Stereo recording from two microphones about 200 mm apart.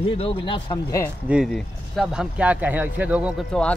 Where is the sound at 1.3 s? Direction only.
Centre (ahead or behind).